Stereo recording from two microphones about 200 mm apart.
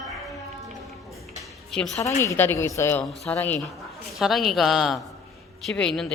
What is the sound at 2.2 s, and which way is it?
A woman's voice, 15° left (ahead or behind).